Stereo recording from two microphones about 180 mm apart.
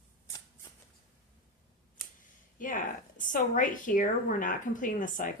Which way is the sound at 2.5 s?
45° left (ahead or behind).